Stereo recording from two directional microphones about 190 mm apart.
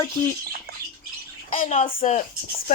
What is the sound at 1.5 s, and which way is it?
Speech, 40° left (ahead or behind).